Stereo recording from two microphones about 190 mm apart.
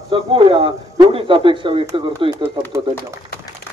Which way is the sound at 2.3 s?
15° right (ahead or behind).